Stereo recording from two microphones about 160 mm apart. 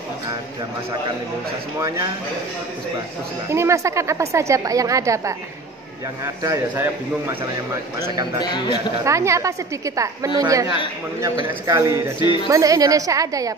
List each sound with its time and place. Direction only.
1.8 s a woman's voice: 20° right (ahead or behind)
3.4 s a woman's voice: 15° right (ahead or behind)
6.4 s a woman's voice: 20° right (ahead or behind)
8.4 s a man's voice: 30° left (ahead or behind)
9.0 s a woman's voice: 20° right (ahead or behind)